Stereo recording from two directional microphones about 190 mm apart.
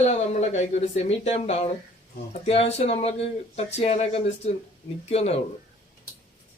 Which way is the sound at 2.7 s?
35° left (ahead or behind).